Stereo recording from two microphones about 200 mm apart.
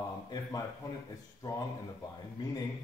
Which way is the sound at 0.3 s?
20° left (ahead or behind).